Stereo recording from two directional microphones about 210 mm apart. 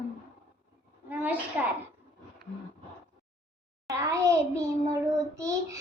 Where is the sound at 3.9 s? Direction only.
15° right (ahead or behind).